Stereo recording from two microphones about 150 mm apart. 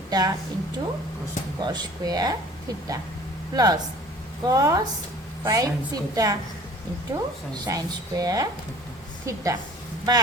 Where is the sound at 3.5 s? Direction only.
25° right (ahead or behind).